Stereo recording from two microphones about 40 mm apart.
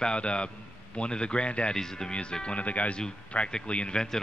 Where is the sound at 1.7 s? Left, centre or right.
Centre.